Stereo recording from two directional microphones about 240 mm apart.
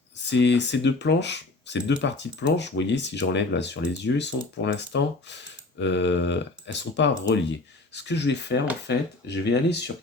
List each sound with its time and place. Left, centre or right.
0.3 s speech: left